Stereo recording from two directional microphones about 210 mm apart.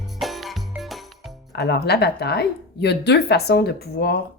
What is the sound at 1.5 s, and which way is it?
A woman's voice, 50° left (ahead or behind).